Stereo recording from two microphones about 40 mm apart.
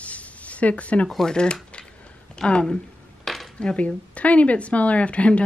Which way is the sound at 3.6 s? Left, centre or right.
Left.